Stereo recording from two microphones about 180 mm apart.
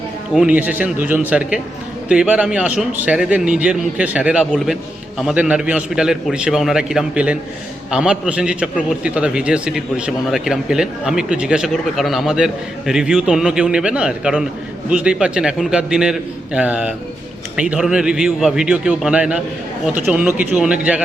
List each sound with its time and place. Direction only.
0.3 s a man's voice: 5° right (ahead or behind)